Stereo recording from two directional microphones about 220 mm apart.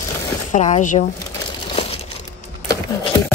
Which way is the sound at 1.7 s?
25° left (ahead or behind).